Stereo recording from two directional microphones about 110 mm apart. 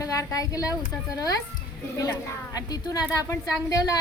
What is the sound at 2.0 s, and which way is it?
Speech, 35° left (ahead or behind).